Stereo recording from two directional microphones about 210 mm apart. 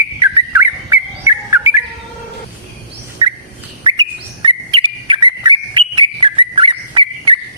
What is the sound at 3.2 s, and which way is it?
Bird, 20° right (ahead or behind).